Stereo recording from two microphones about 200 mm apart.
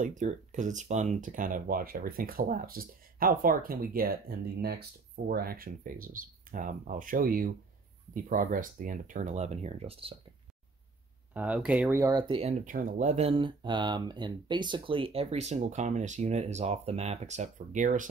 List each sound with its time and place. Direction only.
0.0 s speech: 40° right (ahead or behind)
11.3 s speech: 5° right (ahead or behind); by 12.5 s 30° right (ahead or behind)
12.6 s speech: 40° right (ahead or behind)